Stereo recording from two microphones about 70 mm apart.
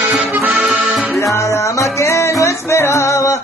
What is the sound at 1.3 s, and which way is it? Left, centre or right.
Music, left.